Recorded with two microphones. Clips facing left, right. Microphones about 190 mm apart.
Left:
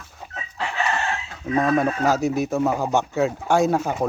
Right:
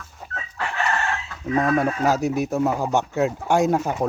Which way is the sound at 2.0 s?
15° right (ahead or behind).